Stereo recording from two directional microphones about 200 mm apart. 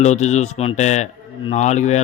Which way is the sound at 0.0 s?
35° left (ahead or behind).